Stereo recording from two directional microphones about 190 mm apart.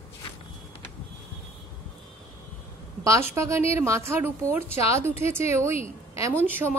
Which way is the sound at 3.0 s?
15° right (ahead or behind).